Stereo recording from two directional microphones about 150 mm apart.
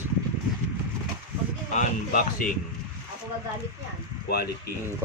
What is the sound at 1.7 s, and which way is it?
Speech, 60° left (ahead or behind).